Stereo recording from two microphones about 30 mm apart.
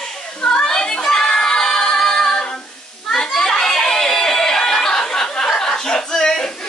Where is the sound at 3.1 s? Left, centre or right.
Centre.